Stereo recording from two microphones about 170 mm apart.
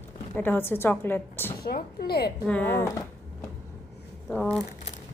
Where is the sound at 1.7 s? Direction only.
65° left (ahead or behind).